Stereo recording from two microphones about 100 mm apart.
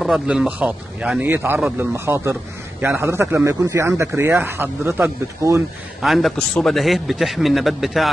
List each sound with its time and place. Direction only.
0.0 s speech: 5° right (ahead or behind)
1.2 s speech: 20° right (ahead or behind)
5.9 s a man's voice: centre (ahead or behind)